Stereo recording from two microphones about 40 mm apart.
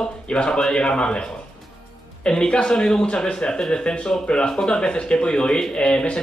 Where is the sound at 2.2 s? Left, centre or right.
Left.